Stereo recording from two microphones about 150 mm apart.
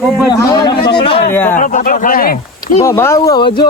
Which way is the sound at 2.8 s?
20° left (ahead or behind).